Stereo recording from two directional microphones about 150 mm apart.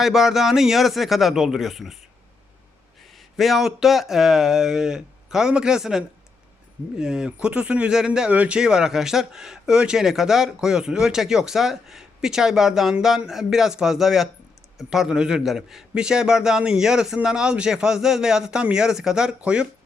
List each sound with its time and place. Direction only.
0.0 s speech: centre (ahead or behind)
3.2 s speech: centre (ahead or behind)